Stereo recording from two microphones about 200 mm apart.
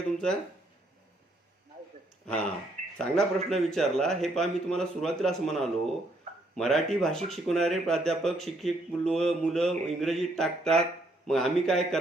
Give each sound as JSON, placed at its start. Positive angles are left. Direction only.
{"t": 2.2, "sound": "speech", "side_deg": 5}